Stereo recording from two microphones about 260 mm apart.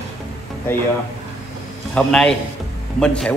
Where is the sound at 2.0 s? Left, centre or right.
Centre.